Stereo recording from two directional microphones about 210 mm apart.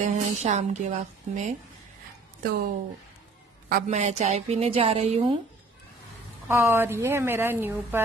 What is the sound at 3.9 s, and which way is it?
Speech, 35° right (ahead or behind).